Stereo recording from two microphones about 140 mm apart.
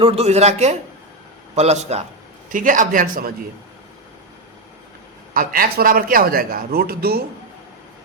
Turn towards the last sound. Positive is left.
turn(degrees=-90)